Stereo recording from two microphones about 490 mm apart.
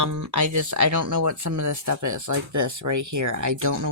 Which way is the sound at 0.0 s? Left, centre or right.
Right.